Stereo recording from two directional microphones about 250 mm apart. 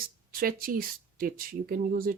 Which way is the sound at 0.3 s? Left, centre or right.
Right.